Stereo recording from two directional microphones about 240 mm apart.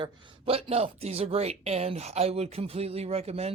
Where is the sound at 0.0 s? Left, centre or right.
Right.